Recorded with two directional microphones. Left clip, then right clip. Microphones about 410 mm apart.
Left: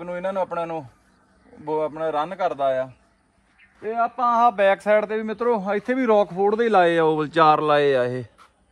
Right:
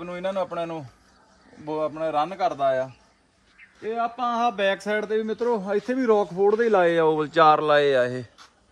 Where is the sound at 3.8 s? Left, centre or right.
Centre.